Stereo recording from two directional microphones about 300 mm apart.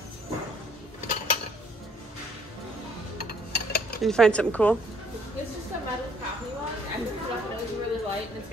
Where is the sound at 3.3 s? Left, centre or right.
Left.